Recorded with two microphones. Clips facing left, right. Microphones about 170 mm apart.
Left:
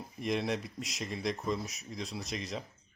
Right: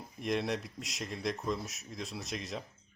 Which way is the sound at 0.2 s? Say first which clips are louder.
Left 1 dB; centre (ahead or behind).